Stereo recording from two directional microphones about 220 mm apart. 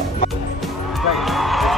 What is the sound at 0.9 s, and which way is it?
Music, centre (ahead or behind).